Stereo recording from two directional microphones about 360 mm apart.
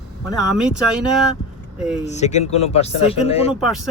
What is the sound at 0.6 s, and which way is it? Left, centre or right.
Speech, centre.